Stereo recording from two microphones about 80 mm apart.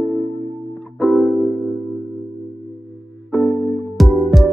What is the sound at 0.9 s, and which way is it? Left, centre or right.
Music, centre.